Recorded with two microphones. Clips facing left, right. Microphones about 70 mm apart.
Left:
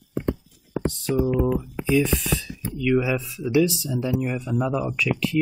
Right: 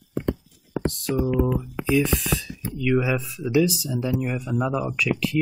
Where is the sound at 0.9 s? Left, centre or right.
Centre.